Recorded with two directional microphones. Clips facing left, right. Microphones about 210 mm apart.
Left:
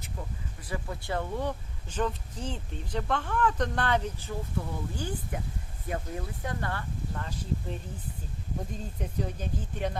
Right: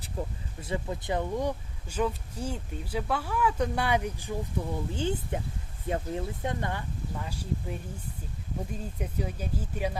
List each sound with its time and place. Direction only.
0.2 s speech: 35° right (ahead or behind)
0.6 s speech: 20° right (ahead or behind)
9.0 s speech: 10° right (ahead or behind)